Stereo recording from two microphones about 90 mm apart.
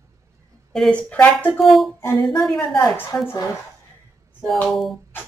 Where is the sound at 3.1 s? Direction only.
25° left (ahead or behind).